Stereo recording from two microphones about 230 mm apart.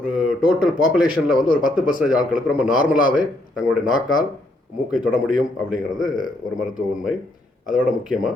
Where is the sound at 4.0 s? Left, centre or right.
Centre.